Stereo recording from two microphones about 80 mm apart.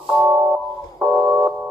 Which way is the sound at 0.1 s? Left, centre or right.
Centre.